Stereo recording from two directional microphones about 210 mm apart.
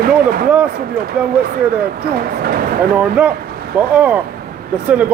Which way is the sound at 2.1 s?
45° right (ahead or behind).